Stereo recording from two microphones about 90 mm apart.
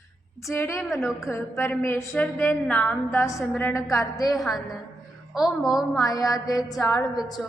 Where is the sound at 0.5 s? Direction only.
30° left (ahead or behind).